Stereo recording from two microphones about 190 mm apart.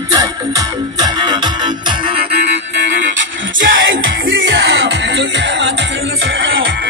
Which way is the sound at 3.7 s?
85° right.